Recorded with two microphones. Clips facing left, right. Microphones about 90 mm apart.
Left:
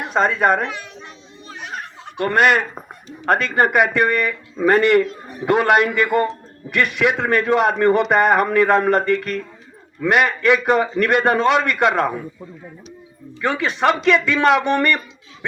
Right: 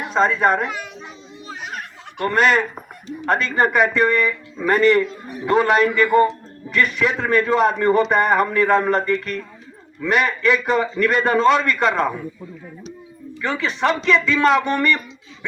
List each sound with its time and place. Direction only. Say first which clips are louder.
0.1 s a man's voice: even; 55° left (ahead or behind)
0.7 s children playing: right 2 dB; 10° right (ahead or behind)
2.2 s a man's voice: left 1 dB; 60° left (ahead or behind)
5.5 s a man's voice: left 1 dB; 65° left (ahead or behind)
13.4 s a man's voice: left 3 dB; 60° left (ahead or behind)